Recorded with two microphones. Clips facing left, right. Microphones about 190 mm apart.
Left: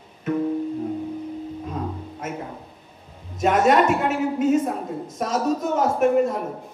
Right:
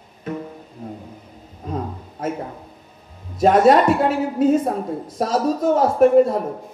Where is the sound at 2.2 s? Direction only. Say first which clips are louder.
Right 7 dB; 35° right (ahead or behind).